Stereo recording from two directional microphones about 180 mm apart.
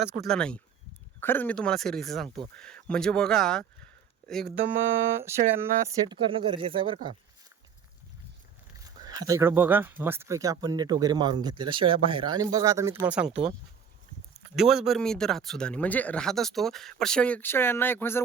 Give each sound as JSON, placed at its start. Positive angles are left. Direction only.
{"t": 0.0, "sound": "speech", "side_deg": -5}
{"t": 5.2, "sound": "speech", "side_deg": -15}
{"t": 8.8, "sound": "speech", "side_deg": -20}
{"t": 14.5, "sound": "speech", "side_deg": 0}